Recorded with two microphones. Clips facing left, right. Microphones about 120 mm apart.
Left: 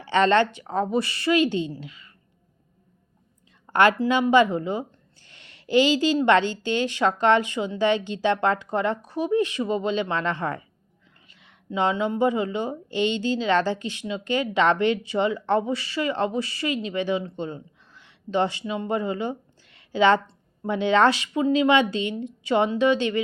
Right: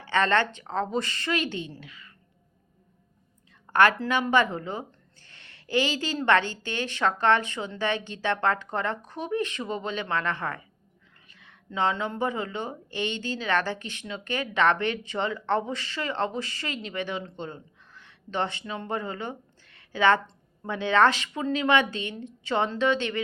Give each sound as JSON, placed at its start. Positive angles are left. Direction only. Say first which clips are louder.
{"t": 0.0, "sound": "speech", "louder": "left 5 dB", "side_deg": 20}
{"t": 3.7, "sound": "a woman's voice", "louder": "left 2 dB", "side_deg": 20}